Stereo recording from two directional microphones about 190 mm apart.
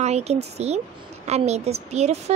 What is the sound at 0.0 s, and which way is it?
A woman's voice, 35° right (ahead or behind).